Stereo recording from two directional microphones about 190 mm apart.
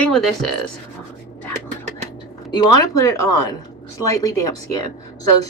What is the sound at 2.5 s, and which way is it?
Speech, 20° left (ahead or behind).